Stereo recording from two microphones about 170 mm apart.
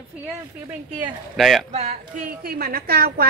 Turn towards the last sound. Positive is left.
turn(degrees=-65)  # may be behind; listen again after turning